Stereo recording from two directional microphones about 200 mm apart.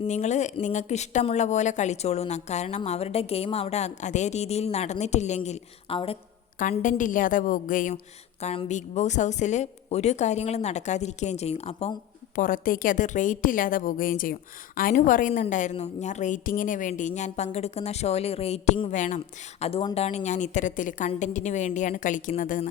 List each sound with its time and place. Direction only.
0.0 s a woman's voice: 35° left (ahead or behind)
6.6 s a woman's voice: 40° left (ahead or behind)
12.4 s a woman's voice: 45° left (ahead or behind)